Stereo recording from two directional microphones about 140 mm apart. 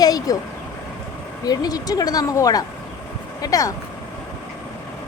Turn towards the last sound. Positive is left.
turn(degrees=25)  # may be behind; listen again after turning